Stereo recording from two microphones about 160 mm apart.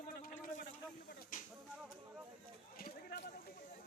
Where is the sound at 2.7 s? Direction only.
70° left (ahead or behind).